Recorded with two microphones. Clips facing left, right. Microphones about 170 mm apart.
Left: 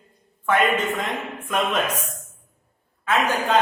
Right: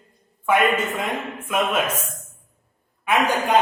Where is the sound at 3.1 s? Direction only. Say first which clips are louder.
Right 1 dB; 15° right (ahead or behind).